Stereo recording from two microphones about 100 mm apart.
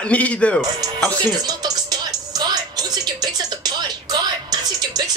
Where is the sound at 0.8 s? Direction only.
40° right (ahead or behind).